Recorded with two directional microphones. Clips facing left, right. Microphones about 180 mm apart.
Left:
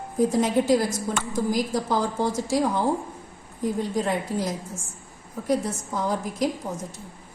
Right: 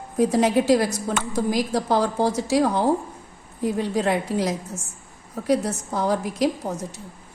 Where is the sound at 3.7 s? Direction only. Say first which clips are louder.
Right 4 dB; 75° right (ahead or behind).